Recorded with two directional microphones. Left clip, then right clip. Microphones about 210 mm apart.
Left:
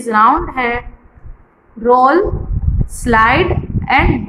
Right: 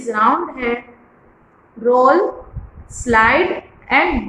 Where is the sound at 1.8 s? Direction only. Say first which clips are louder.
Left 2 dB; 40° left (ahead or behind).